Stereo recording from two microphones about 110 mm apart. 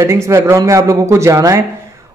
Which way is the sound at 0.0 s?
25° right (ahead or behind).